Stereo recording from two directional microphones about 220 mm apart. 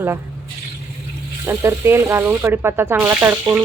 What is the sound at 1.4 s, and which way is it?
A woman's voice, 10° right (ahead or behind).